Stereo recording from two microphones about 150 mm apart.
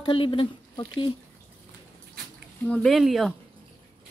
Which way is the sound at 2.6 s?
Centre (ahead or behind).